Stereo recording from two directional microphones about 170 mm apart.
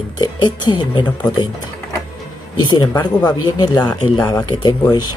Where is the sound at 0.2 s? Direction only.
25° left (ahead or behind).